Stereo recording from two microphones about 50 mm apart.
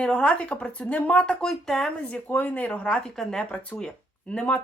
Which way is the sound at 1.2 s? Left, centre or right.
Centre.